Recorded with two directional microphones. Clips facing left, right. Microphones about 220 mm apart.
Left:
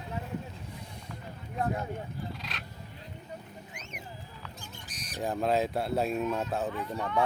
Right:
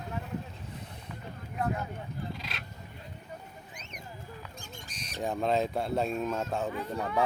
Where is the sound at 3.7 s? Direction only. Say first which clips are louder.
Left 2 dB; 35° right (ahead or behind).